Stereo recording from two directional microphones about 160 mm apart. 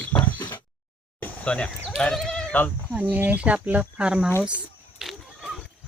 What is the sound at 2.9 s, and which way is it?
Speech, 10° right (ahead or behind).